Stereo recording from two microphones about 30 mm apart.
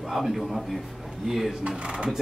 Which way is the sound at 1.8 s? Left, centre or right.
Right.